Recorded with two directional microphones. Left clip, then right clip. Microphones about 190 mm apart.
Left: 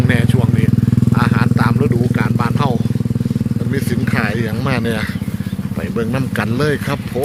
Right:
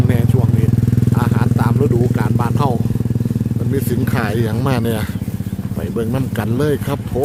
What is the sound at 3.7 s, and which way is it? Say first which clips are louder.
Speech: even; 25° right (ahead or behind).